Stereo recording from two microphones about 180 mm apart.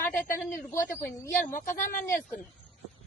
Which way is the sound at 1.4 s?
45° left (ahead or behind).